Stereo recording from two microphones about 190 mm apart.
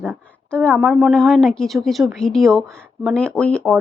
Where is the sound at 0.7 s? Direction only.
Centre (ahead or behind).